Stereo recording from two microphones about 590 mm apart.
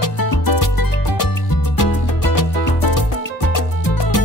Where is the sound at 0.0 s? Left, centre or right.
Left.